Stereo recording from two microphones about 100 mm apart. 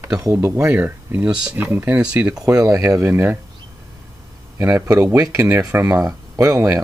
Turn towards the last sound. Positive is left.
turn(degrees=-35)  # may be behind; listen again after turning